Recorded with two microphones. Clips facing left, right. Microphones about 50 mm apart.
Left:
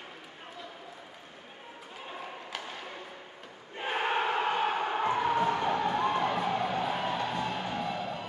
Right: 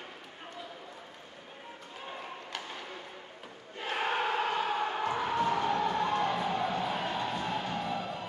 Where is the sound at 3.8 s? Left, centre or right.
Left.